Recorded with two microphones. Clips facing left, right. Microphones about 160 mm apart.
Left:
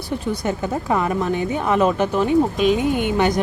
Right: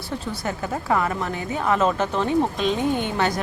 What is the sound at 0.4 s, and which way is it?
A woman's voice, 20° left (ahead or behind).